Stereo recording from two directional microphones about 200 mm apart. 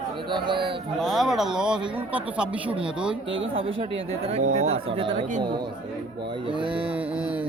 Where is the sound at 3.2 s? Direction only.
70° right (ahead or behind).